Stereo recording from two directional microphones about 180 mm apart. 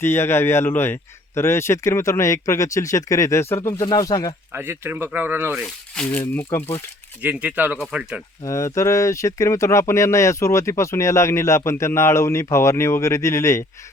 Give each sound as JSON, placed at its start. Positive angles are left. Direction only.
{"t": 0.0, "sound": "speech", "side_deg": 15}
{"t": 4.5, "sound": "speech", "side_deg": -15}
{"t": 5.9, "sound": "speech", "side_deg": 5}
{"t": 7.2, "sound": "speech", "side_deg": -10}
{"t": 8.4, "sound": "speech", "side_deg": 15}